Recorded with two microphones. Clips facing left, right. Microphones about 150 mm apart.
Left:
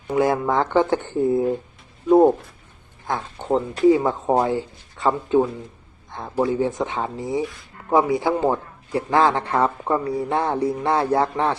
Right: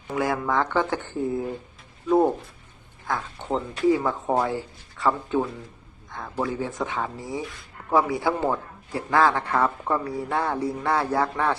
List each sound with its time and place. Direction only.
0.1 s a man's voice: 25° left (ahead or behind)
2.0 s a man's voice: 25° left (ahead or behind)
6.1 s a sound: 25° left (ahead or behind)
6.4 s a man's voice: 25° left (ahead or behind)